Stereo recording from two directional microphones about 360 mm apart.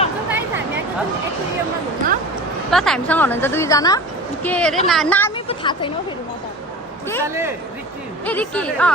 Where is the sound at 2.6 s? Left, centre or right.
Centre.